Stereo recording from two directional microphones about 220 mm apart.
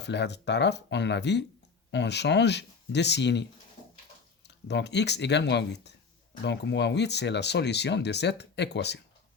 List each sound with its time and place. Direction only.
0.0 s speech: 50° left (ahead or behind)